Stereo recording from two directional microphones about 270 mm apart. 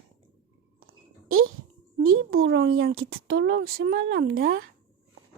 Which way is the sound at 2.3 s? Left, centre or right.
Right.